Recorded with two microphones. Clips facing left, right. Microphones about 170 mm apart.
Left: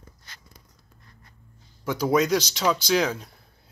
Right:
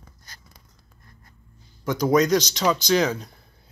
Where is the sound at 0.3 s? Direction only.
40° right (ahead or behind).